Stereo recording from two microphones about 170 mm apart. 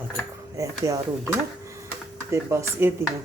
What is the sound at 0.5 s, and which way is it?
Speech, 20° right (ahead or behind).